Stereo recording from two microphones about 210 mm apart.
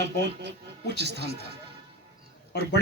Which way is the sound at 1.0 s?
50° right (ahead or behind).